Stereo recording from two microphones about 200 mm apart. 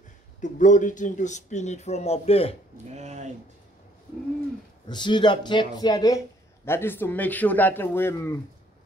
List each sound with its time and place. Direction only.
0.4 s speech: 40° left (ahead or behind)
2.9 s a sound: 35° right (ahead or behind)
4.8 s speech: 20° left (ahead or behind)